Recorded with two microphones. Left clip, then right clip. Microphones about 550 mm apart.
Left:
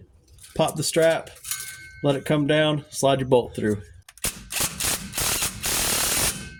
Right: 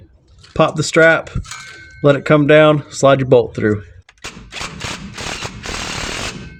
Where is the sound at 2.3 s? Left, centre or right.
Centre.